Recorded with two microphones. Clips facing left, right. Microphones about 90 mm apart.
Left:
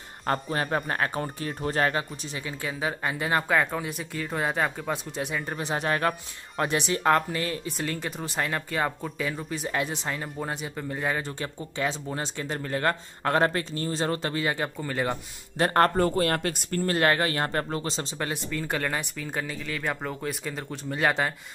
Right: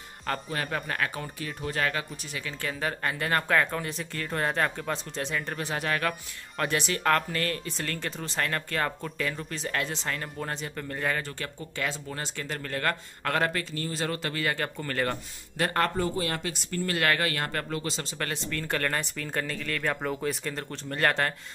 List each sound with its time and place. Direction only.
0.3 s speech: 35° left (ahead or behind)
2.6 s speech: 10° left (ahead or behind)
5.7 s speech: 25° left (ahead or behind)
15.5 s speech: 35° left (ahead or behind)
16.0 s speech: 55° left (ahead or behind)
16.8 s speech: 30° left (ahead or behind)
18.5 s speech: 10° left (ahead or behind)